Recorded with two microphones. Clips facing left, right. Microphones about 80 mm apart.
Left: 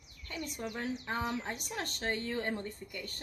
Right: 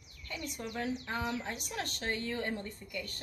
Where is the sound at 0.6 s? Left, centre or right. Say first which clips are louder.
Right 2 dB; left.